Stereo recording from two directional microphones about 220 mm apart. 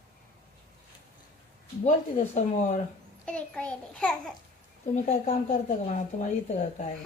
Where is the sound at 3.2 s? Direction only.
5° left (ahead or behind).